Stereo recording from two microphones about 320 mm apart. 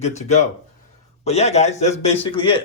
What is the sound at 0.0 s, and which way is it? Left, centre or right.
Speech, left.